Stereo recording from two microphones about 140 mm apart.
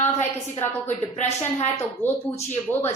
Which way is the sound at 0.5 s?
55° left (ahead or behind).